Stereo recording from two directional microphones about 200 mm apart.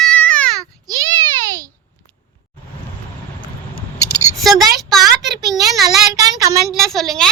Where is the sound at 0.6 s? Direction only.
20° right (ahead or behind).